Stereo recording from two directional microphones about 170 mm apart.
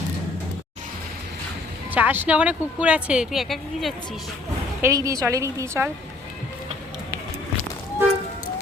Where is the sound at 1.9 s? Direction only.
10° right (ahead or behind).